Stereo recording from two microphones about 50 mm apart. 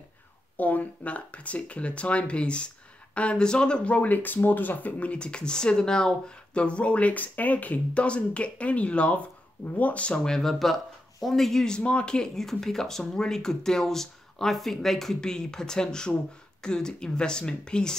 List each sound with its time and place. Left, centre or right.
0.6 s speech: left
5.1 s speech: centre
10.1 s speech: centre
10.4 s speech: centre
11.6 s speech: centre
12.4 s speech: centre